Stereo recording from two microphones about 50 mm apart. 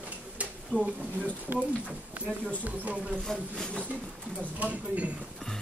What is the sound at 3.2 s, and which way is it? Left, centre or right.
Speech, centre.